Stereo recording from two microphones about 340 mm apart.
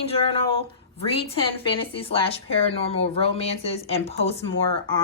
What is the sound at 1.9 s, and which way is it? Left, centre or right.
Speech, centre.